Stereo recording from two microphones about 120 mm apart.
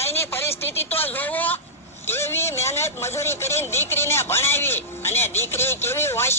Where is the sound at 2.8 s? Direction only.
20° left (ahead or behind).